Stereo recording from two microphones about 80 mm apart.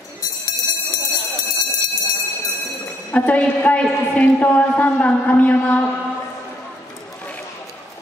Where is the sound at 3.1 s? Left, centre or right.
Centre.